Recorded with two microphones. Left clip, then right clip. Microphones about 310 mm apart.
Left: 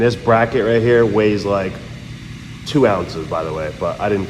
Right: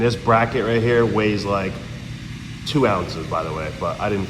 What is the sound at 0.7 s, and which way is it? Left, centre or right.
Speech, centre.